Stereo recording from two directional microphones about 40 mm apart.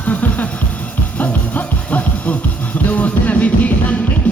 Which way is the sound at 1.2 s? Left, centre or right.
Left.